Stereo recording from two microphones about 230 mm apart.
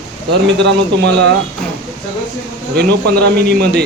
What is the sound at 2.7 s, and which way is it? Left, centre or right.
A man's voice, right.